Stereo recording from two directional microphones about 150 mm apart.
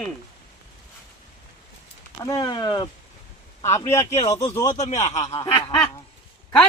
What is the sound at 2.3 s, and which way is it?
Speech, 30° left (ahead or behind).